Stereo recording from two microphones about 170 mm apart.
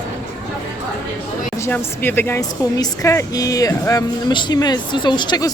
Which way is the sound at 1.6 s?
10° left (ahead or behind).